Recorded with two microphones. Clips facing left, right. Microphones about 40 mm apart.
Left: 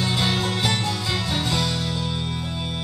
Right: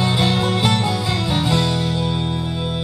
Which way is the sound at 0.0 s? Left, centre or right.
Centre.